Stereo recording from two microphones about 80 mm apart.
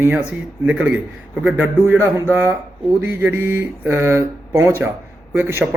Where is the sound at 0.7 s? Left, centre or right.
Centre; by 4.8 s right.